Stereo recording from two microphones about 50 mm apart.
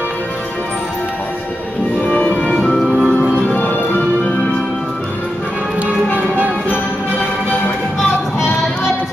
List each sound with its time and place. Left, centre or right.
2.0 s music: left
2.6 s music: centre
3.1 s music: left